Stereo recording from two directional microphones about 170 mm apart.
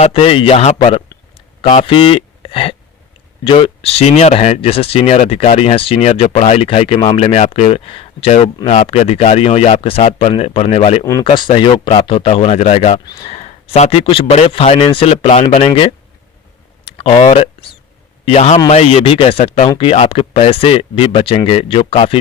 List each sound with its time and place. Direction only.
0.0 s speech: 35° left (ahead or behind)
13.1 s speech: 25° left (ahead or behind)
13.3 s speech: 40° left (ahead or behind)
16.8 s a sound: 35° left (ahead or behind)
18.3 s speech: 40° left (ahead or behind)